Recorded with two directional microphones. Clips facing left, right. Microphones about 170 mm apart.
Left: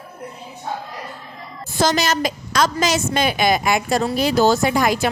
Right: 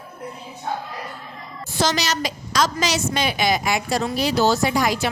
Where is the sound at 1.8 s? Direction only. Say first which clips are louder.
Left 4 dB; 50° left (ahead or behind).